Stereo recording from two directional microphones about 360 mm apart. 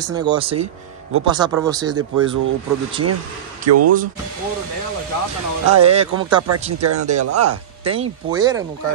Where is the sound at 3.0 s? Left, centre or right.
Right.